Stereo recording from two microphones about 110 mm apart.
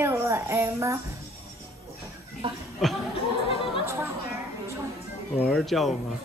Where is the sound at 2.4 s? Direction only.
50° right (ahead or behind).